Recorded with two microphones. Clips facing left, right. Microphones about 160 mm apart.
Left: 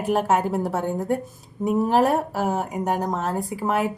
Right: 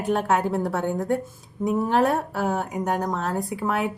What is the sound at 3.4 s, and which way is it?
Speech, centre (ahead or behind).